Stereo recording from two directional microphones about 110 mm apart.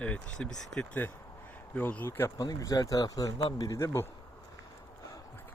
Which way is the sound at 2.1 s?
25° left (ahead or behind).